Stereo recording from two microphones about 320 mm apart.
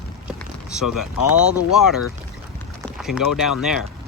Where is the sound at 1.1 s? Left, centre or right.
Left.